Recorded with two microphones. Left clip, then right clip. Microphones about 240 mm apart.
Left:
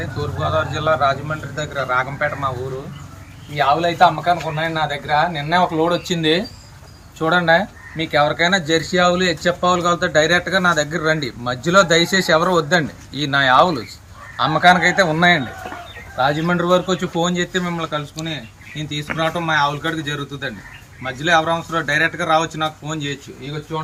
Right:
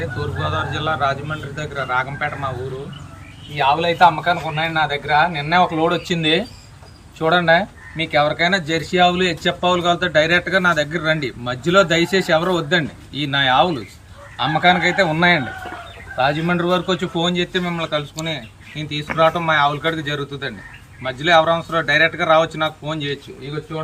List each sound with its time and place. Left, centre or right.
0.4 s speech: centre
3.5 s speech: centre